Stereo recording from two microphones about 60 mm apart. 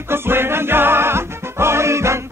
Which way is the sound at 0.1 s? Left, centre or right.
Right.